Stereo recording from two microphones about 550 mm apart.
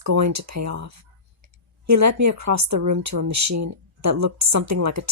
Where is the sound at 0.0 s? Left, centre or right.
Right.